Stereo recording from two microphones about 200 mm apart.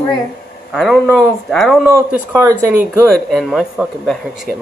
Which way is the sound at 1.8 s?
10° right (ahead or behind).